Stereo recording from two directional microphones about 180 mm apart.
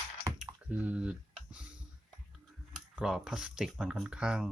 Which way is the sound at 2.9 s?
5° right (ahead or behind).